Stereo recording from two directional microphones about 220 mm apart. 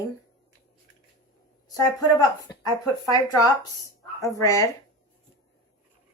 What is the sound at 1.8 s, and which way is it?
Speech, 20° left (ahead or behind).